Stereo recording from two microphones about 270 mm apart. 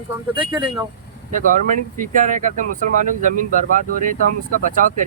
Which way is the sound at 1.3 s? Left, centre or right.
Right.